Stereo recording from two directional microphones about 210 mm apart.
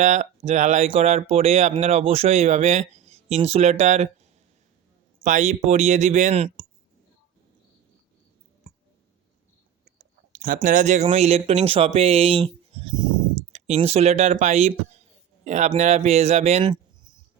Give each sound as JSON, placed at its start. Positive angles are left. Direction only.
{"t": 0.0, "sound": "speech", "side_deg": -35}
{"t": 10.3, "sound": "speech", "side_deg": -40}